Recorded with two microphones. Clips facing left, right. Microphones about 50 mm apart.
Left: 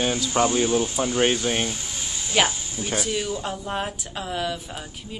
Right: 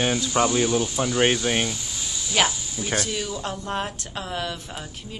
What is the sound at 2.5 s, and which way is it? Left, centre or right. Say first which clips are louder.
Speech: right 1 dB; left.